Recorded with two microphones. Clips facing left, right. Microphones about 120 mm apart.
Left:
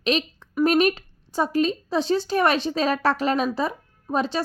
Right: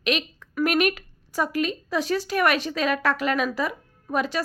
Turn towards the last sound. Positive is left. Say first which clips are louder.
# left 1 dB
turn(degrees=30)  # may be behind; listen again after turning